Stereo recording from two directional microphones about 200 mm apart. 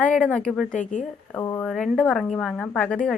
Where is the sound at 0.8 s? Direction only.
40° left (ahead or behind).